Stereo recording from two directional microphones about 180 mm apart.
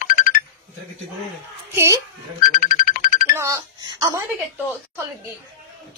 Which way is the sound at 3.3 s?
15° right (ahead or behind).